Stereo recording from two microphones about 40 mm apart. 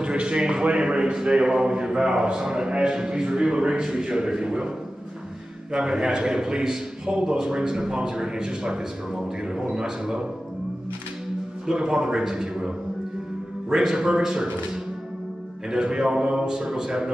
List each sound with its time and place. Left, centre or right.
0.0 s a man's voice: right
11.6 s a man's voice: centre